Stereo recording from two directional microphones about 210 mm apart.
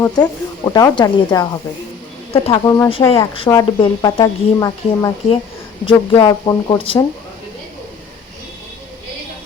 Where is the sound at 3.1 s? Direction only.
25° left (ahead or behind).